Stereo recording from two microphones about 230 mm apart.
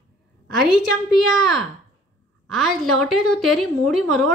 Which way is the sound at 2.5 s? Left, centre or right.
Centre.